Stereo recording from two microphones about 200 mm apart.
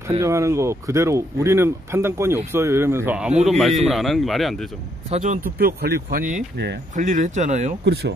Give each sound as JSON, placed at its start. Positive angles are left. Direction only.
{"t": 0.2, "sound": "speech", "side_deg": -15}
{"t": 5.1, "sound": "speech", "side_deg": -40}
{"t": 7.8, "sound": "speech", "side_deg": -55}